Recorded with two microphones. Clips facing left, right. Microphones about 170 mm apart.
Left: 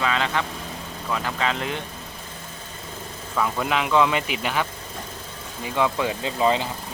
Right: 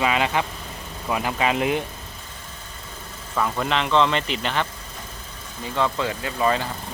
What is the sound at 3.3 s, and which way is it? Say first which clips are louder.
Speech: even; centre (ahead or behind).